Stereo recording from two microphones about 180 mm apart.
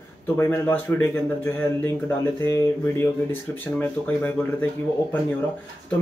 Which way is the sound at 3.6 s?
10° left (ahead or behind).